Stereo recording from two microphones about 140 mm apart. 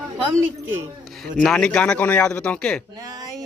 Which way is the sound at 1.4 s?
5° left (ahead or behind).